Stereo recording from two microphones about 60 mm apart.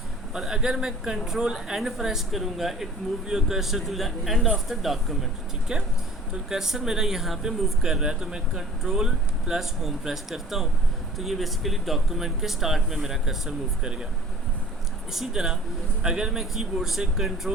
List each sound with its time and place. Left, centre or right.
0.3 s speech: centre
6.5 s speech: centre
15.1 s speech: centre